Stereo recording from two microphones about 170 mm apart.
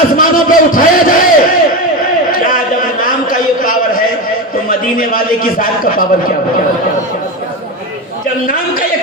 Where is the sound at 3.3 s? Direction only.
55° left (ahead or behind).